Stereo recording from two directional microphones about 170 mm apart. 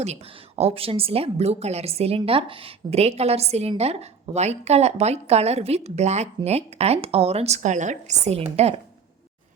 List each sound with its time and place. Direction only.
0.0 s speech: 40° right (ahead or behind)